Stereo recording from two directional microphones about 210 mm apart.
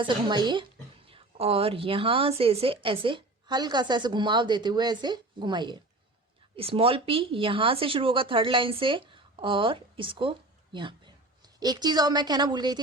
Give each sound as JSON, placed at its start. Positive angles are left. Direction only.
{"t": 0.0, "sound": "a woman's voice", "side_deg": -20}